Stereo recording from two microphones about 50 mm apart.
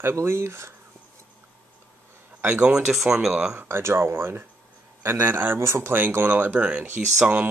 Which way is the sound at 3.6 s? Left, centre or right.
Right.